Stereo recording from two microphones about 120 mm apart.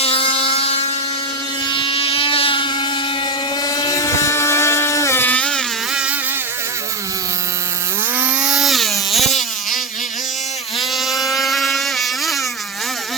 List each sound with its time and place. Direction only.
0.0 s motorboat: 50° left (ahead or behind)
1.6 s motorboat: 45° left (ahead or behind)
3.6 s motorboat: 30° left (ahead or behind); by 5.6 s 10° left (ahead or behind)
5.9 s insect: 5° right (ahead or behind)
8.1 s a sound: 15° right (ahead or behind); by 9.4 s centre (ahead or behind)
10.8 s mosquito: centre (ahead or behind)